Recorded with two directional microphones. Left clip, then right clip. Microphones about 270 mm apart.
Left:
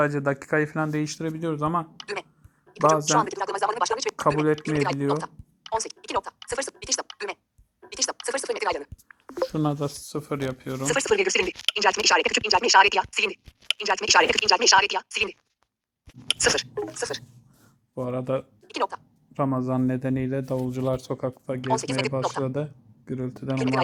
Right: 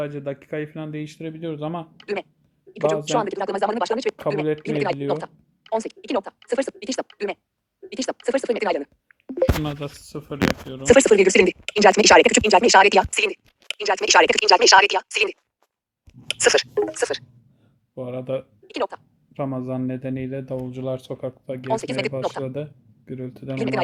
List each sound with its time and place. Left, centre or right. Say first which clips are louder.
0.0 s speech: left 5 dB; centre
7.9 s a sound: right 3 dB; centre
9.6 s speech: left 3 dB; centre
16.4 s speech: right 8 dB; centre
20.7 s speech: left 1 dB; centre